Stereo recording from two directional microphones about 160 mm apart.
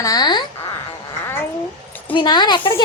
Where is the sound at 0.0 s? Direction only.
25° left (ahead or behind).